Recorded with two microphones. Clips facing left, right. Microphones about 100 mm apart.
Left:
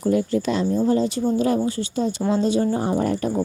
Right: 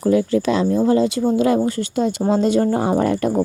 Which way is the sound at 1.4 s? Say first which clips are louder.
Right 4 dB; 80° right.